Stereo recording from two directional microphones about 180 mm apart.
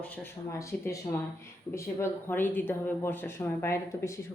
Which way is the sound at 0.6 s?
15° left (ahead or behind).